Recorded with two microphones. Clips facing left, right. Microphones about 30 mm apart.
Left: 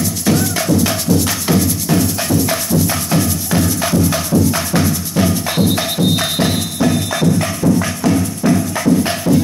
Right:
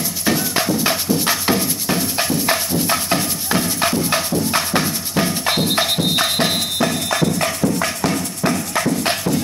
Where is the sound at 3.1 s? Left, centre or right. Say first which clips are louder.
Left 3 dB; right.